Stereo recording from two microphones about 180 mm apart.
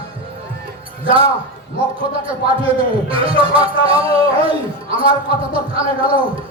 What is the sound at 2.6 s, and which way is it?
Music, 30° right (ahead or behind).